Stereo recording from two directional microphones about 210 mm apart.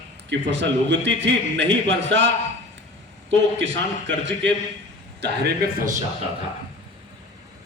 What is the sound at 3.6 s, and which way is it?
A man's voice, 55° right (ahead or behind).